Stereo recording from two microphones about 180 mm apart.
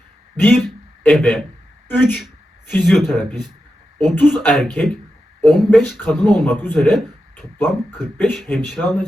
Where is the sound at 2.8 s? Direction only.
Centre (ahead or behind).